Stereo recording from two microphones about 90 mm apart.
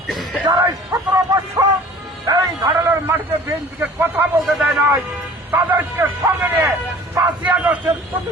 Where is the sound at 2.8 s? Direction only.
25° right (ahead or behind).